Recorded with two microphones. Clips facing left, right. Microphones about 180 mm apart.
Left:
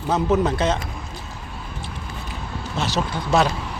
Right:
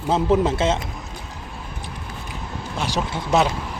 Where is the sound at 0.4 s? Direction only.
25° right (ahead or behind).